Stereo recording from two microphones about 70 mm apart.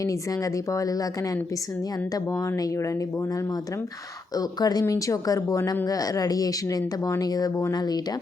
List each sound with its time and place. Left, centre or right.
4.4 s speech: left